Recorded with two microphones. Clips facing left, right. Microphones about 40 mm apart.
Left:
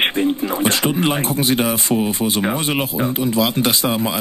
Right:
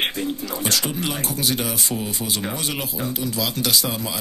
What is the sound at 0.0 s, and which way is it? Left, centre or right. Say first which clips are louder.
Speech: left 7 dB; left.